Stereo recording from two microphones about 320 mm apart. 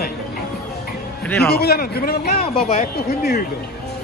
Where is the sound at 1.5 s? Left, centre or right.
Left.